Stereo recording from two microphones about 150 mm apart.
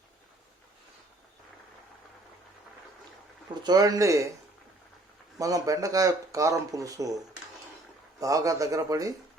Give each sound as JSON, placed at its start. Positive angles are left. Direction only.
{"t": 3.5, "sound": "speech", "side_deg": -30}
{"t": 5.4, "sound": "speech", "side_deg": -25}
{"t": 8.2, "sound": "speech", "side_deg": -20}